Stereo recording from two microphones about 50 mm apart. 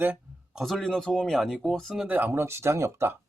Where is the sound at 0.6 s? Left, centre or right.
Centre.